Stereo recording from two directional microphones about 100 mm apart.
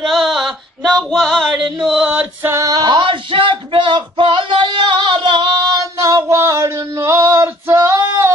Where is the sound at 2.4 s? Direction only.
25° right (ahead or behind).